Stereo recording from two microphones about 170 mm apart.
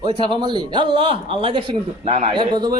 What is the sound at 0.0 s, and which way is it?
Speech, 30° right (ahead or behind).